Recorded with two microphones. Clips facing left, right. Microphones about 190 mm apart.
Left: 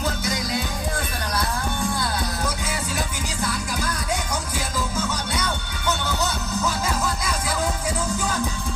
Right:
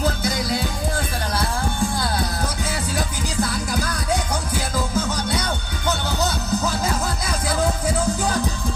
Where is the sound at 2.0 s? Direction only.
35° right (ahead or behind).